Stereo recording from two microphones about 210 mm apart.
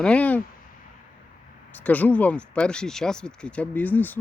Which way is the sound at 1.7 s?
5° left (ahead or behind).